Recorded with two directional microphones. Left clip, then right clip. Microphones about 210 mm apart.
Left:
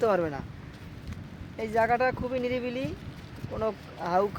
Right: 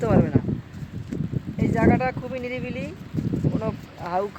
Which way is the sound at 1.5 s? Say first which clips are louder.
Right 3 dB; 25° left (ahead or behind).